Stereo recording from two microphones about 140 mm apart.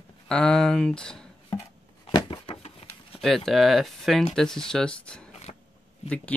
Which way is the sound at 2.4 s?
45° left (ahead or behind).